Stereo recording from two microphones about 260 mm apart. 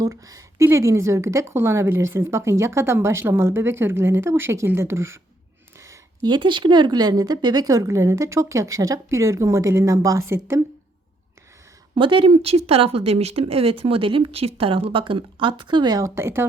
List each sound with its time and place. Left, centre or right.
0.0 s speech: centre
11.9 s speech: centre